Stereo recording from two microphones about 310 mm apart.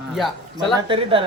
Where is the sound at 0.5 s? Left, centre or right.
Centre.